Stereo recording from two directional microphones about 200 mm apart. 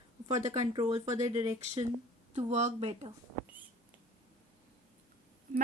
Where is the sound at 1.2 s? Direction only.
30° right (ahead or behind).